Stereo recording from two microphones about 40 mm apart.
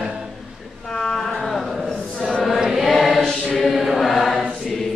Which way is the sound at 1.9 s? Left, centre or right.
Centre.